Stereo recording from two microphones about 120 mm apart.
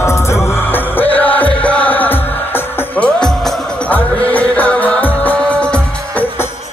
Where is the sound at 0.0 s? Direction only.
25° left (ahead or behind).